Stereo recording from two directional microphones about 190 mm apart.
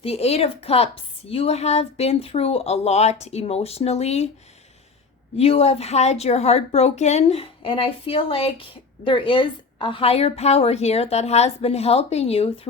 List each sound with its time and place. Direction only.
0.0 s a woman's voice: 30° left (ahead or behind)
5.4 s a woman's voice: 30° left (ahead or behind)